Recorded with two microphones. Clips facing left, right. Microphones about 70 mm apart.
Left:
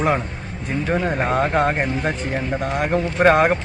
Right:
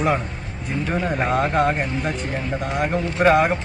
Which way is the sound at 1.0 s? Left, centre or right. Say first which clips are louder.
Left 1 dB; left.